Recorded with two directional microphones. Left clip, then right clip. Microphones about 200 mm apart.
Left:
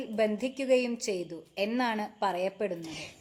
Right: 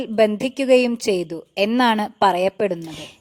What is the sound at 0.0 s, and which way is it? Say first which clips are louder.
A woman's voice: right 11 dB; 45° right (ahead or behind).